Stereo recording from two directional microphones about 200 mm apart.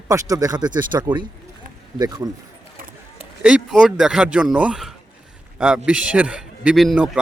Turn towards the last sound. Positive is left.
turn(degrees=-5)  # may be behind; listen again after turning